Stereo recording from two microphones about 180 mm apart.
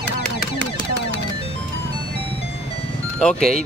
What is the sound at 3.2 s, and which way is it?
Speech, 5° left (ahead or behind).